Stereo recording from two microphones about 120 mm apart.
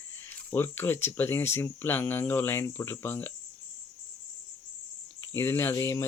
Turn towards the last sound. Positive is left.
turn(degrees=25)  # may be behind; listen again after turning